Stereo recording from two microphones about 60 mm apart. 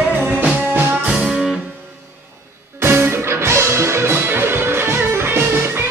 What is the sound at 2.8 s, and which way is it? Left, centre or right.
Music, right.